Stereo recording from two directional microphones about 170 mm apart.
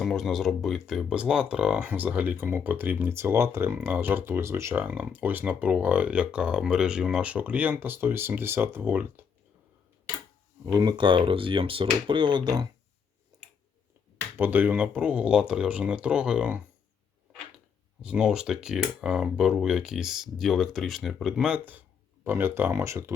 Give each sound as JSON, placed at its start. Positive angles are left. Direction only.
{"t": 0.0, "sound": "speech", "side_deg": 0}
{"t": 10.7, "sound": "speech", "side_deg": -25}
{"t": 13.3, "sound": "finger snapping", "side_deg": -25}
{"t": 14.3, "sound": "speech", "side_deg": -10}
{"t": 18.0, "sound": "speech", "side_deg": -5}